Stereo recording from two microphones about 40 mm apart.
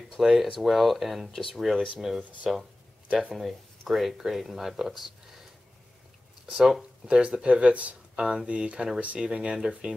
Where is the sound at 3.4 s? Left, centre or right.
Centre.